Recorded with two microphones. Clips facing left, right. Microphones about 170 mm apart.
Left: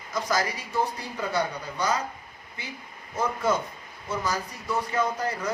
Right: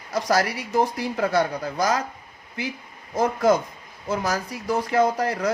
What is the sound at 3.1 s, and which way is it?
Speech, 90° right.